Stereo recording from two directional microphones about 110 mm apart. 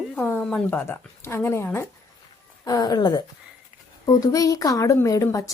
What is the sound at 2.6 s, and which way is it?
A woman's voice, 35° left (ahead or behind).